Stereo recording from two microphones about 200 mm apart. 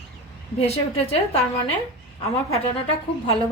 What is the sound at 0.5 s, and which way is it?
Speech, 30° left (ahead or behind).